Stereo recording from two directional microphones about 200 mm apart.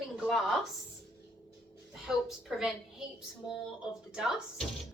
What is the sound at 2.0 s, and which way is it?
Speech, centre (ahead or behind).